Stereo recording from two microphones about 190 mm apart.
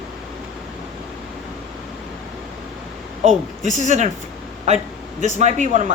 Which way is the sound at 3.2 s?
40° right (ahead or behind).